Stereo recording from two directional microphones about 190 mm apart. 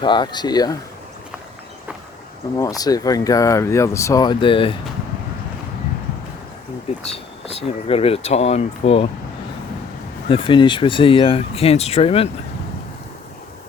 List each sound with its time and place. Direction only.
0.0 s speech: 25° left (ahead or behind)
2.6 s speech: 20° left (ahead or behind)
7.1 s speech: 30° left (ahead or behind)
10.2 s speech: 25° left (ahead or behind)